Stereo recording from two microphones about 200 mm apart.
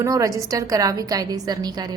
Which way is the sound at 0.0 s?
15° right (ahead or behind).